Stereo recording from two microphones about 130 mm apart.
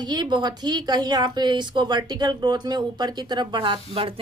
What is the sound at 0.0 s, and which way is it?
A woman's voice, 35° right (ahead or behind).